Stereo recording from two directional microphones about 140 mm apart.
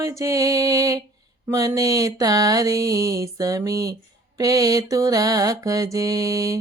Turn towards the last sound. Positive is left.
turn(degrees=-25)  # may be behind; listen again after turning